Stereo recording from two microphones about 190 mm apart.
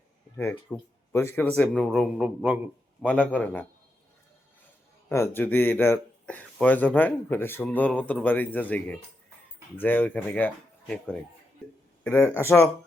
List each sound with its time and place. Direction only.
0.3 s a man's voice: 10° left (ahead or behind); by 2.6 s 5° right (ahead or behind)
3.0 s speech: 5° left (ahead or behind)
5.0 s speech: 15° left (ahead or behind)